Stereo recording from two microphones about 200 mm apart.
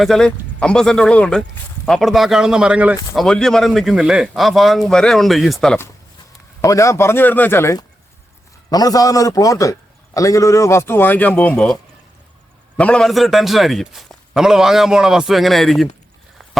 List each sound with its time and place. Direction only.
0.0 s a man's voice: 5° left (ahead or behind)
12.7 s speech: 5° left (ahead or behind)